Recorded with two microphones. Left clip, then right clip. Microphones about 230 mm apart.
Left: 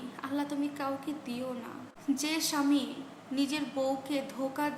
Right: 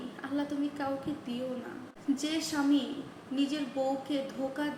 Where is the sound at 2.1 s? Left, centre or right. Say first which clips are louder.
Left 2 dB; centre.